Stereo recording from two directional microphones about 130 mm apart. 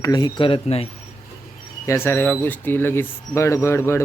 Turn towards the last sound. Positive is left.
turn(degrees=20)  # may be behind; listen again after turning